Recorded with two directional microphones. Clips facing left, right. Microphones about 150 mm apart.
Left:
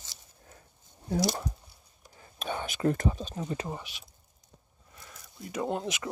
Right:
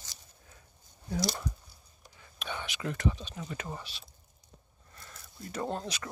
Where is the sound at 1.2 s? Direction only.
45° left (ahead or behind).